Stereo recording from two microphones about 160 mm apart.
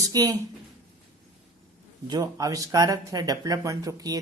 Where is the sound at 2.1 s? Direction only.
25° right (ahead or behind).